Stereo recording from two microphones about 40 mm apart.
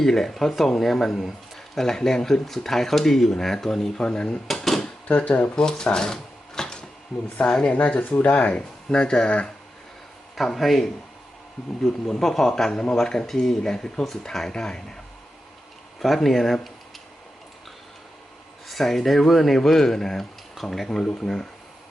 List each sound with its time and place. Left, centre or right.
0.0 s speech: centre
4.4 s drawer open or close: centre
5.0 s speech: left
5.5 s speech: centre
7.7 s speech: left
8.4 s speech: left
10.3 s speech: centre
11.9 s speech: centre
12.2 s speech: centre
13.6 s speech: centre
14.5 s speech: centre
16.0 s speech: centre
18.7 s speech: centre